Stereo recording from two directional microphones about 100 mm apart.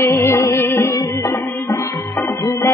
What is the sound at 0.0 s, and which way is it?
Music, 25° left (ahead or behind).